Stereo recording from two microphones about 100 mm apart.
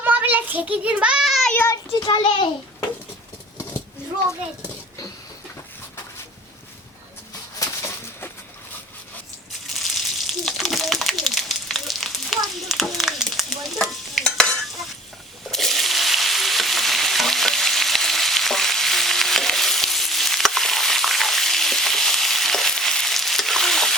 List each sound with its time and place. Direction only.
0.0 s child singing: 20° right (ahead or behind); by 1.5 s centre (ahead or behind)
1.6 s a child's voice: 30° left (ahead or behind)
2.0 s a child's voice: 50° left (ahead or behind)
7.6 s a sound: 30° left (ahead or behind)
9.6 s a sound: centre (ahead or behind)
15.4 s frying: centre (ahead or behind)